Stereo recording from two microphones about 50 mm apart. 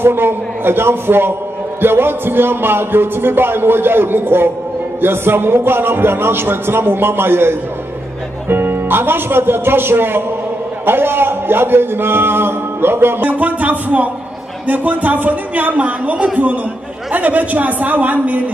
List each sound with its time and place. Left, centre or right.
0.0 s a man's voice: right